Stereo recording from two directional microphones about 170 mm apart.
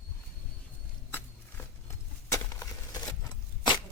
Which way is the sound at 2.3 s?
20° left (ahead or behind).